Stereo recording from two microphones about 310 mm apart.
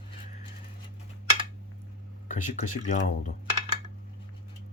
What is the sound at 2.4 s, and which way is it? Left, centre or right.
Speech, left.